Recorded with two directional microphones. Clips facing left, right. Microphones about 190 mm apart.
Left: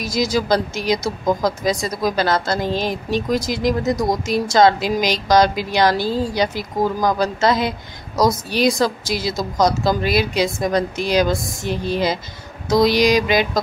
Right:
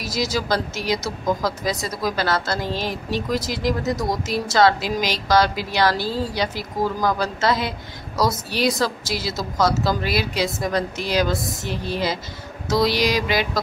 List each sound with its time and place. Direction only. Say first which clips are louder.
0.0 s a woman's voice: left 4 dB; 15° left (ahead or behind)